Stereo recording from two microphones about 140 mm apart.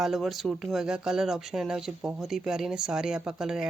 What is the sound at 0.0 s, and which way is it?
Speech, centre (ahead or behind).